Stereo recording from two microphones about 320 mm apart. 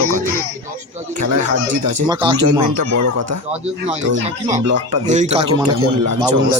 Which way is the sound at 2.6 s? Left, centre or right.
Right.